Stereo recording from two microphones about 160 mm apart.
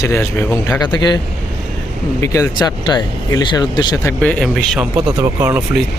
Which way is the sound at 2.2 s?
20° left (ahead or behind).